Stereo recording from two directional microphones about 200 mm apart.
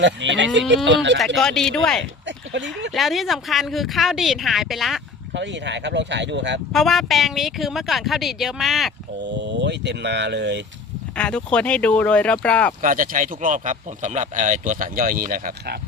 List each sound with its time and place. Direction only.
0.0 s speech: 65° right (ahead or behind)
1.4 s speech: centre (ahead or behind)
2.2 s a sound: 65° right (ahead or behind)
2.9 s speech: centre (ahead or behind)
5.3 s speech: 60° right (ahead or behind)
6.7 s speech: centre (ahead or behind)
9.4 s speech: 60° right (ahead or behind)
11.2 s speech: 5° left (ahead or behind)
12.8 s speech: 40° right (ahead or behind)